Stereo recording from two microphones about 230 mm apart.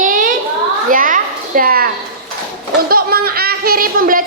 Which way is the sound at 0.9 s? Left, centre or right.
Right.